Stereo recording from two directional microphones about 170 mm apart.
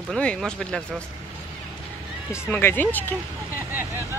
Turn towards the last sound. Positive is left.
turn(degrees=10)  # may be behind; listen again after turning